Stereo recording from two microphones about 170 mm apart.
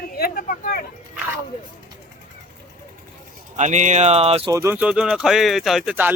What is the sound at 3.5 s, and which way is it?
Speech, 45° right (ahead or behind).